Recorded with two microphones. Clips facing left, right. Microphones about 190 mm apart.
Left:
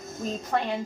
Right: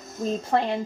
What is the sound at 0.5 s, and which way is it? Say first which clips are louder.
Speech: right 4 dB; 30° right (ahead or behind).